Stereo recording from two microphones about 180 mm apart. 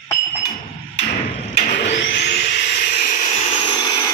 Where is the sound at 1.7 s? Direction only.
75° left (ahead or behind).